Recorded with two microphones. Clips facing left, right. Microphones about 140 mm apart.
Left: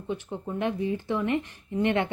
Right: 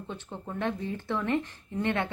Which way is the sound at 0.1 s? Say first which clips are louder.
Left 8 dB; 15° left (ahead or behind).